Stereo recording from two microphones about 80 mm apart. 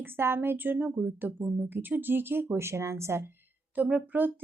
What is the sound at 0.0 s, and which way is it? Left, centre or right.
A woman's voice, right.